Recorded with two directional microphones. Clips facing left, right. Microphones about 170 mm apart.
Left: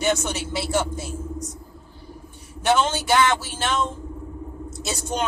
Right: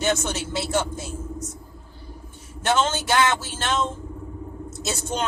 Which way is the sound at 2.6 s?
10° left (ahead or behind).